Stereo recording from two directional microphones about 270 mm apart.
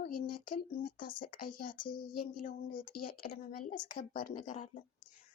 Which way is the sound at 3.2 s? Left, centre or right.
Left.